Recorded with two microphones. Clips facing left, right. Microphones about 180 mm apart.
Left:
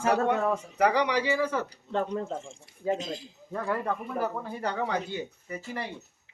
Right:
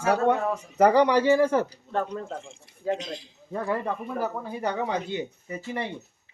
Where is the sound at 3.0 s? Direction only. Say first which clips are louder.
Left 1 dB; 40° left (ahead or behind).